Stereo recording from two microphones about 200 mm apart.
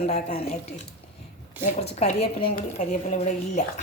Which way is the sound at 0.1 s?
35° left (ahead or behind).